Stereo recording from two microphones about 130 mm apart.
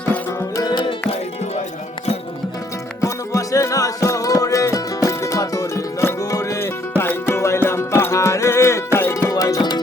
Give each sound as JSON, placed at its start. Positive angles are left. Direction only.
{"t": 0.1, "sound": "music", "side_deg": 20}
{"t": 3.0, "sound": "music", "side_deg": 25}